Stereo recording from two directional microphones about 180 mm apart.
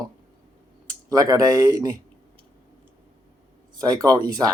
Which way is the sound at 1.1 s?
20° right (ahead or behind).